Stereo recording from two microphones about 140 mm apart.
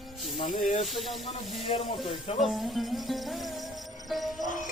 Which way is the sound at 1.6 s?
40° left (ahead or behind).